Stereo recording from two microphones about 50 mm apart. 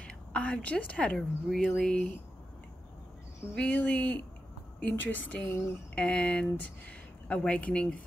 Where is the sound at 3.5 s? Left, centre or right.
Left.